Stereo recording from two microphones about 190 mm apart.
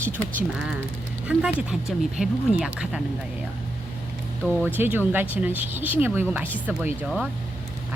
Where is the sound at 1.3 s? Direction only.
5° right (ahead or behind).